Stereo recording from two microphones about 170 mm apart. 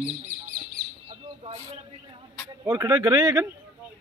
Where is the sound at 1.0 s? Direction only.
35° right (ahead or behind).